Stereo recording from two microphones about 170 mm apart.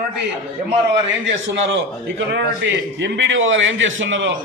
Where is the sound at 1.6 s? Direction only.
90° right.